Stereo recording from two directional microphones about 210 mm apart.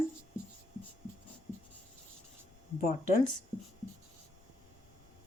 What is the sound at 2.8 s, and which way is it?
Speech, 35° left (ahead or behind).